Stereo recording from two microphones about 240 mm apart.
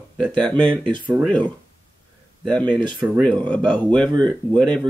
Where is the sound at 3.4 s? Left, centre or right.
Centre.